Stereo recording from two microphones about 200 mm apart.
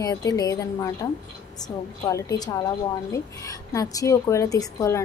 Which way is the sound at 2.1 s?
15° left (ahead or behind).